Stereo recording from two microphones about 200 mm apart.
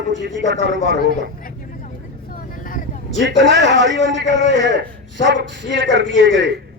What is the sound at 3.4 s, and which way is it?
A man's voice, 65° right (ahead or behind).